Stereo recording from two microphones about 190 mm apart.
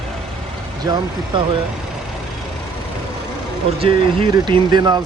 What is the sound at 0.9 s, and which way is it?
Speech, 20° right (ahead or behind).